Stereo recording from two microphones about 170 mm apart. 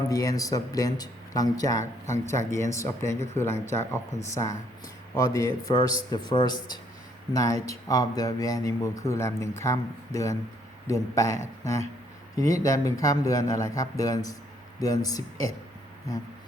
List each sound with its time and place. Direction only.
0.1 s speech: 20° left (ahead or behind)
1.8 s speech: 45° right (ahead or behind)
2.5 s speech: 15° left (ahead or behind)